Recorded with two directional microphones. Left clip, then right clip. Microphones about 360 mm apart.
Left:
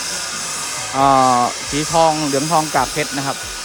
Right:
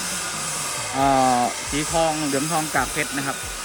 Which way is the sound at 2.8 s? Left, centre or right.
Centre.